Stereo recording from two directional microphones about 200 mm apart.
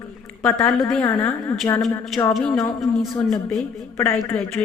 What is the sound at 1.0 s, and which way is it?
Speech, 15° left (ahead or behind).